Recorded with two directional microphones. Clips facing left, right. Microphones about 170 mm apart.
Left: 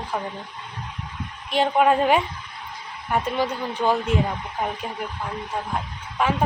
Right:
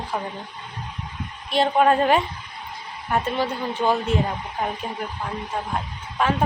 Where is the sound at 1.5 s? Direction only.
10° left (ahead or behind).